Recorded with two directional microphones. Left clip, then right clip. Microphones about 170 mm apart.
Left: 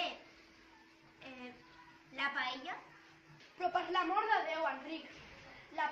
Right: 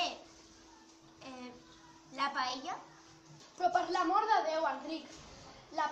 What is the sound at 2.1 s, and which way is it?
Speech, 5° right (ahead or behind).